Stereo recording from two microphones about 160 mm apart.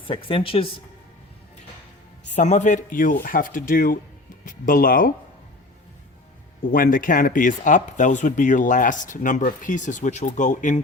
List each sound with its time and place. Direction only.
0.0 s speech: 35° left (ahead or behind)
2.3 s speech: 50° left (ahead or behind)
6.7 s speech: 60° left (ahead or behind)